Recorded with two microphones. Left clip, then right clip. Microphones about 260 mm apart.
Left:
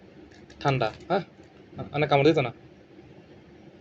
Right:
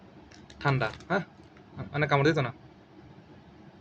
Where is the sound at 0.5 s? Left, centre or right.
Centre.